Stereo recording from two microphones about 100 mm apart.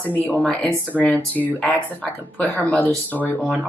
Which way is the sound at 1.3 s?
15° left (ahead or behind).